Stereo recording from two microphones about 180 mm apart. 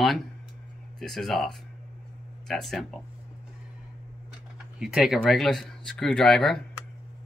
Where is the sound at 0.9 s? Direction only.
Centre (ahead or behind).